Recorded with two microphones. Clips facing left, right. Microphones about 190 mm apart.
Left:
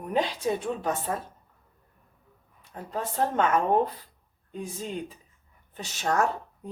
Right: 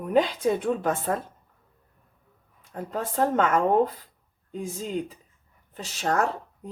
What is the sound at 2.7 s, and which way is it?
Speech, 45° right (ahead or behind).